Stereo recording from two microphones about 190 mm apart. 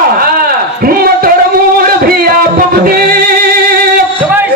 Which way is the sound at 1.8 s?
50° right (ahead or behind).